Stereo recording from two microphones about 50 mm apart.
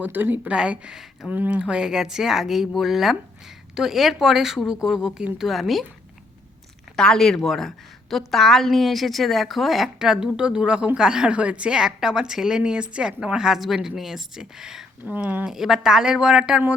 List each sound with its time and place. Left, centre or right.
0.0 s speech: right
0.5 s speech: centre
1.3 s a woman's voice: right; by 5.8 s centre
6.9 s a woman's voice: centre; by 11.8 s right
11.8 s speech: centre
15.0 s speech: right
15.4 s speech: centre